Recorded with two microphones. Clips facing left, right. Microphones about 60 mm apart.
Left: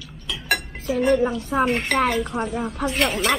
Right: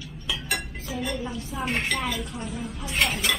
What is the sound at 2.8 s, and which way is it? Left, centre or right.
Dishes, centre.